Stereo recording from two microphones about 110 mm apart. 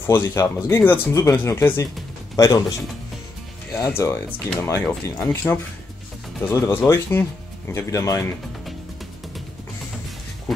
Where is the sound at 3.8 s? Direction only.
25° left (ahead or behind).